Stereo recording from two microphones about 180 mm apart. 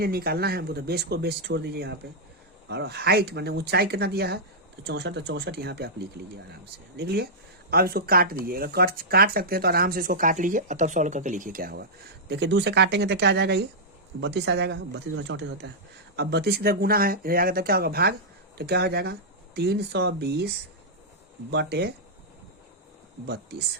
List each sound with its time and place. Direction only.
0.0 s speech: 60° right (ahead or behind)
6.9 s speech: 65° right (ahead or behind)
12.3 s speech: 70° right (ahead or behind)
14.2 s speech: 80° right
21.5 s speech: 65° right (ahead or behind)
23.2 s speech: 65° right (ahead or behind)